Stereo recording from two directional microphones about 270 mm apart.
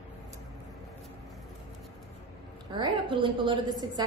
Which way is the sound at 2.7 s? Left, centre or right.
Centre.